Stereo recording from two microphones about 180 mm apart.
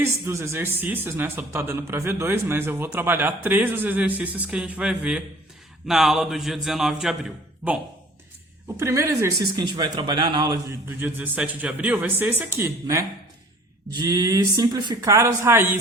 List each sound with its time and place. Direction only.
0.0 s a man's voice: 15° right (ahead or behind)
8.6 s speech: 15° right (ahead or behind)
11.0 s speech: 10° right (ahead or behind)